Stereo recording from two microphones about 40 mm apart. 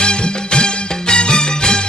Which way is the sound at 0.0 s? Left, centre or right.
Left.